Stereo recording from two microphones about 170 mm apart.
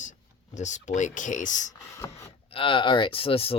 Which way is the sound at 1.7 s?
20° left (ahead or behind).